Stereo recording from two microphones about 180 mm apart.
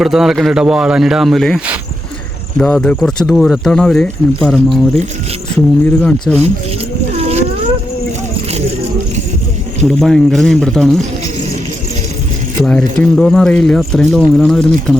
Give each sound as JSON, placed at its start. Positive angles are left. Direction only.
{"t": 0.0, "sound": "speech", "side_deg": 0}
{"t": 5.8, "sound": "speech", "side_deg": 5}
{"t": 7.1, "sound": "boat", "side_deg": -35}
{"t": 9.8, "sound": "speech", "side_deg": 5}
{"t": 12.6, "sound": "speech", "side_deg": 5}